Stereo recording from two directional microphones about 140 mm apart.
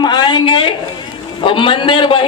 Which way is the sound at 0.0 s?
30° left (ahead or behind).